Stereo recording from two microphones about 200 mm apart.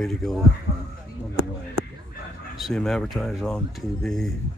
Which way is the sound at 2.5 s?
Centre (ahead or behind).